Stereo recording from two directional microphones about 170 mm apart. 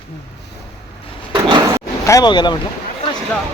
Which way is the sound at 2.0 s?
20° left (ahead or behind).